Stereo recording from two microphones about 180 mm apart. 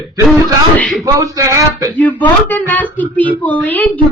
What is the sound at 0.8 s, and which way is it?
Speech, centre (ahead or behind).